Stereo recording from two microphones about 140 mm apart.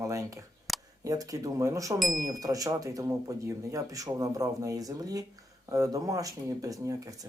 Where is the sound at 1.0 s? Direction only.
25° right (ahead or behind).